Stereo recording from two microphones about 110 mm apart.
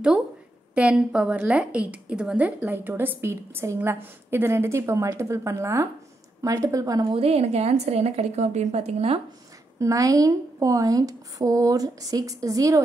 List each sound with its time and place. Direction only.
0.7 s a woman's voice: 10° right (ahead or behind); by 7.2 s 30° right (ahead or behind)
7.2 s a woman's voice: 65° right (ahead or behind)
9.8 s a woman's voice: 30° right (ahead or behind)